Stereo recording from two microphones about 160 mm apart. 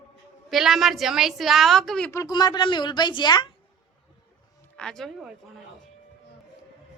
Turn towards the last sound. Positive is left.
turn(degrees=5)  # may be behind; listen again after turning